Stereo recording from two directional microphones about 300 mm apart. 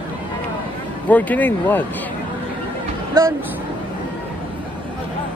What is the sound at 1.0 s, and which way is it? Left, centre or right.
Speech, centre.